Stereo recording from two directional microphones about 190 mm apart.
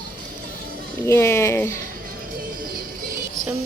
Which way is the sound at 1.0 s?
15° left (ahead or behind).